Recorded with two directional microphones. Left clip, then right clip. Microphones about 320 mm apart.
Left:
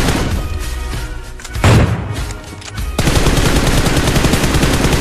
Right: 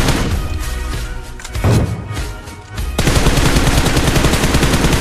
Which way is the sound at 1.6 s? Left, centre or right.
Left.